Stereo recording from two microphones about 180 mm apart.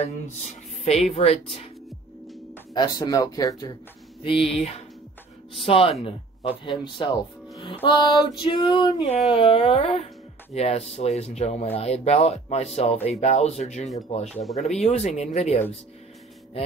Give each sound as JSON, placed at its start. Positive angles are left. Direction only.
{"t": 0.8, "sound": "speech", "side_deg": 35}
{"t": 2.7, "sound": "music", "side_deg": 25}
{"t": 4.2, "sound": "speech", "side_deg": 30}
{"t": 6.0, "sound": "music", "side_deg": 30}
{"t": 9.3, "sound": "speech", "side_deg": 30}
{"t": 14.3, "sound": "speech", "side_deg": 0}
{"t": 14.6, "sound": "speech", "side_deg": 40}